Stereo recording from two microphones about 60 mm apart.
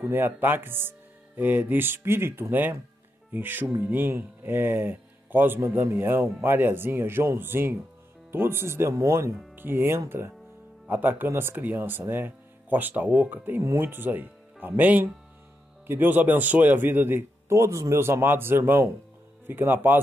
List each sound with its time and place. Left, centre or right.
0.0 s speech: right
5.6 s speech: right
9.6 s speech: right
10.9 s speech: right
13.6 s speech: right
17.5 s speech: right
18.0 s speech: right